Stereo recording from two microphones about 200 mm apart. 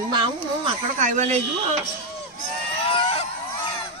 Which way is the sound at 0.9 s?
40° right (ahead or behind).